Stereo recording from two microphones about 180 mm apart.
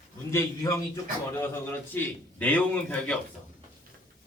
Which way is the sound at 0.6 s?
20° left (ahead or behind).